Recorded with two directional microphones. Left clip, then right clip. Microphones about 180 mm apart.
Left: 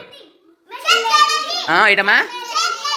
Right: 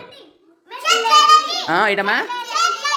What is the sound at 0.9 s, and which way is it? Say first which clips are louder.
Children playing: right 2 dB; centre (ahead or behind).